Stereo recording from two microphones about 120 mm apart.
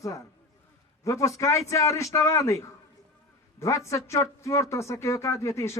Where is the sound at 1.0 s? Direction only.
25° left (ahead or behind).